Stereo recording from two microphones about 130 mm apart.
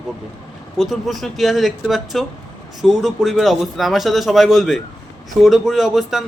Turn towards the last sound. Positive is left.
turn(degrees=0)  # may be behind; listen again after turning